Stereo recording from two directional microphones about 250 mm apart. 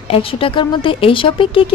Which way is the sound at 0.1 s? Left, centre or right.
Left.